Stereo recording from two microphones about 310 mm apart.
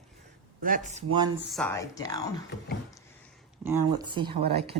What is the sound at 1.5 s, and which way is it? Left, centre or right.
Speech, centre.